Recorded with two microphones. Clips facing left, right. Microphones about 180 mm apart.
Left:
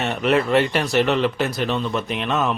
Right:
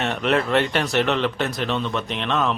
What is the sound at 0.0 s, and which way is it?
Speech, centre (ahead or behind).